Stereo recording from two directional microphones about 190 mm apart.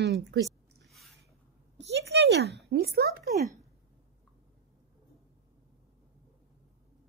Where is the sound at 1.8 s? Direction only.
65° right (ahead or behind).